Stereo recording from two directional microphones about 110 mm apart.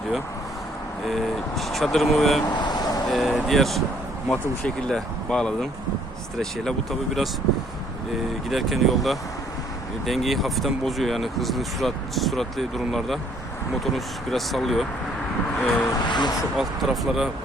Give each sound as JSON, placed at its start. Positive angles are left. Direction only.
{"t": 1.0, "sound": "speech", "side_deg": 0}
{"t": 2.5, "sound": "vehicle", "side_deg": 40}
{"t": 3.1, "sound": "speech", "side_deg": 0}
{"t": 8.4, "sound": "speech", "side_deg": 0}
{"t": 15.9, "sound": "speech", "side_deg": 40}
{"t": 16.6, "sound": "speech", "side_deg": 0}